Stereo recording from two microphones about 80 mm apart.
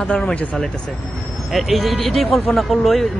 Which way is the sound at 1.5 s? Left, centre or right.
Centre.